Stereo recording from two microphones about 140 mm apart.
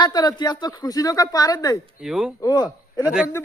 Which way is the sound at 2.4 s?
25° left (ahead or behind).